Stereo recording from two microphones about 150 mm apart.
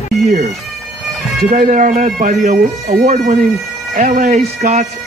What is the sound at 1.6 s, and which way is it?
Speech, 60° right (ahead or behind).